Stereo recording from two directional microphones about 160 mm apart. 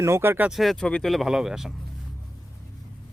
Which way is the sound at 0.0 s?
15° right (ahead or behind).